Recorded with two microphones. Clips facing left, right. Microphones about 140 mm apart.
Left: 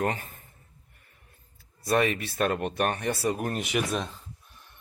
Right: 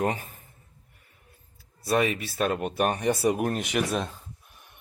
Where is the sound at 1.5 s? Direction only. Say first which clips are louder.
Even; 5° right (ahead or behind).